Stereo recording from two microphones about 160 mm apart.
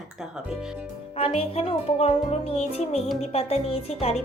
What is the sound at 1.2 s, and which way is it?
Speech, 40° left (ahead or behind).